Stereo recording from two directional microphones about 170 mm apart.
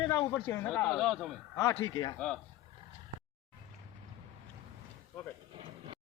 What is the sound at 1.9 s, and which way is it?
Speech, 25° left (ahead or behind).